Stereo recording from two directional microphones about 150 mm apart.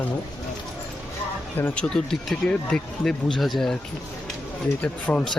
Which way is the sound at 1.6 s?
10° left (ahead or behind).